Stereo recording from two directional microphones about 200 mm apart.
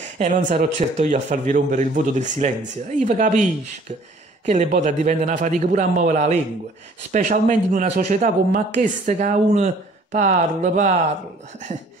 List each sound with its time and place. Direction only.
0.2 s a man's voice: 40° right (ahead or behind)
4.5 s a man's voice: 40° right (ahead or behind)